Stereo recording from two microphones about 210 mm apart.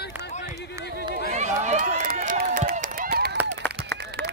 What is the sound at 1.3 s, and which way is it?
Run, 35° right (ahead or behind).